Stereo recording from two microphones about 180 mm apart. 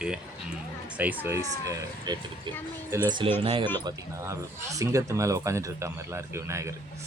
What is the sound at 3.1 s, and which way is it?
Speech, 25° right (ahead or behind).